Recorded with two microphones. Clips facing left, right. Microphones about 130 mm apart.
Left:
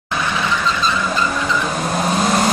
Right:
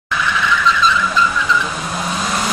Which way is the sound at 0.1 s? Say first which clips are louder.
Right 2 dB; 40° left (ahead or behind).